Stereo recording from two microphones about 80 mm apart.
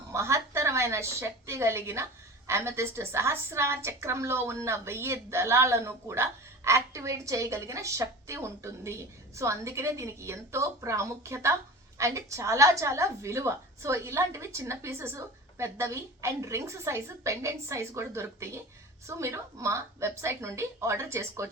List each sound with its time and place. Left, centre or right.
0.1 s a woman's voice: right